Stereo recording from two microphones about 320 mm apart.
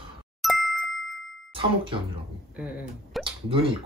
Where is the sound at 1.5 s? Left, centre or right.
Centre.